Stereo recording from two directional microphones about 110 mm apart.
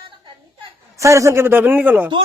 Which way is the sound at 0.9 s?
30° right (ahead or behind).